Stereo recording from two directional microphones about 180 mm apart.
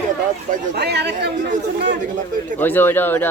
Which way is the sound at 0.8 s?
70° right (ahead or behind).